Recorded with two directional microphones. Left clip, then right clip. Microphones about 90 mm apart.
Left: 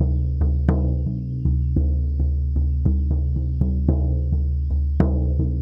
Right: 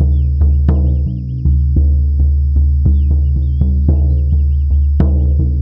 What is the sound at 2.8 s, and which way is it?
Music, centre (ahead or behind).